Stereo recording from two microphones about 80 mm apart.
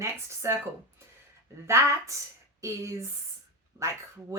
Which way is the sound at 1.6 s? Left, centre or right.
Right.